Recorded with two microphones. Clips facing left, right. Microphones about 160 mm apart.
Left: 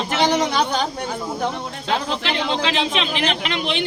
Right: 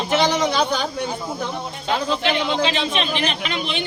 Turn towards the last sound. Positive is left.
turn(degrees=90)